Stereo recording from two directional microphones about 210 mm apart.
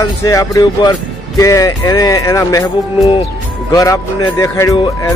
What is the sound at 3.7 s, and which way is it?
Speech, 15° left (ahead or behind).